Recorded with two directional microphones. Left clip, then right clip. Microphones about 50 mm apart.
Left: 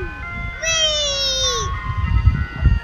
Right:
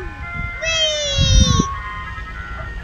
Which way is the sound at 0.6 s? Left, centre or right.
Right.